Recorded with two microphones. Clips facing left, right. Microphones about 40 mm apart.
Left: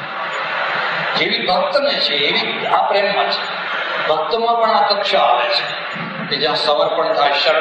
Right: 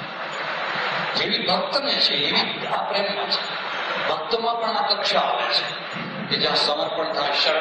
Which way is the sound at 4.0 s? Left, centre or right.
Left.